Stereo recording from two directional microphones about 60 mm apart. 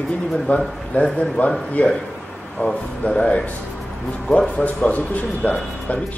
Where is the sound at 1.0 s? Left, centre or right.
Centre.